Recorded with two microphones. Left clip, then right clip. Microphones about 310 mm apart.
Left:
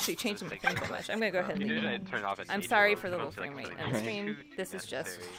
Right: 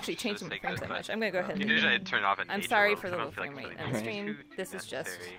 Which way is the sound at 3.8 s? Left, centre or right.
Centre.